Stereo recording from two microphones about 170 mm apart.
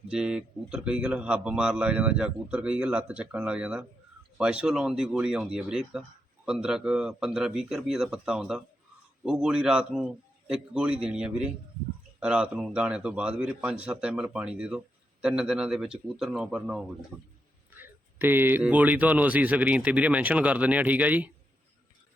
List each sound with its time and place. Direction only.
0.1 s speech: 5° right (ahead or behind)